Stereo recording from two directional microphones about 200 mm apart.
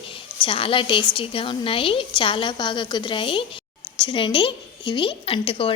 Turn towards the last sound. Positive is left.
turn(degrees=25)  # may be behind; listen again after turning